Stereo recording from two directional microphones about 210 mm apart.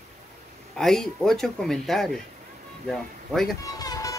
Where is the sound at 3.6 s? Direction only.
15° left (ahead or behind).